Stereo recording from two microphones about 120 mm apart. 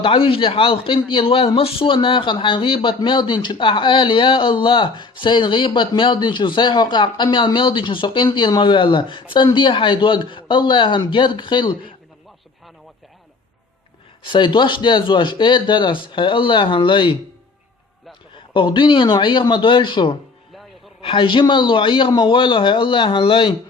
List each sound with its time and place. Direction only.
0.0 s speech: 50° left (ahead or behind)
14.3 s speech: 40° left (ahead or behind)
18.3 s speech: 45° left (ahead or behind)